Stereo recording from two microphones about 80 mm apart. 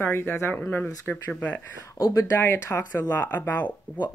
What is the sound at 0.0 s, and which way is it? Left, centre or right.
Speech, left.